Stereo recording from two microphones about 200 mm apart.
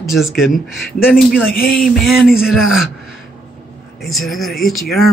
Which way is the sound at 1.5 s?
50° left (ahead or behind).